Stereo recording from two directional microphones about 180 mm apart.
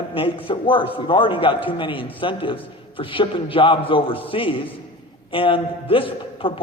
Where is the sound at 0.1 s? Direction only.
30° left (ahead or behind).